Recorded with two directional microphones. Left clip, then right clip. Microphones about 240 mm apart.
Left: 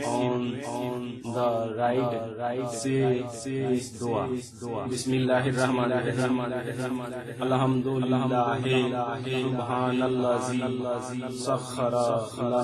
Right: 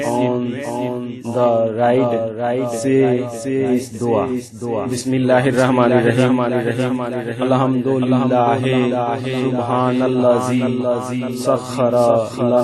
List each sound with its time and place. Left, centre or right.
0.0 s mantra: right
1.4 s a man's voice: right
5.3 s a man's voice: right
8.1 s a man's voice: right